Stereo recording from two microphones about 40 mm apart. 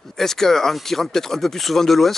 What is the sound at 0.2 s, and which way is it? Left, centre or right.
Speech, centre.